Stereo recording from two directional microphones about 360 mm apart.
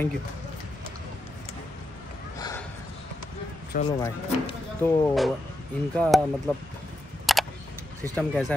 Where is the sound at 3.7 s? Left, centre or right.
Left.